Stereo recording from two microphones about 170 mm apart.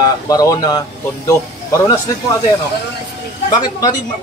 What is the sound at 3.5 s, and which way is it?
Speech, 25° left (ahead or behind).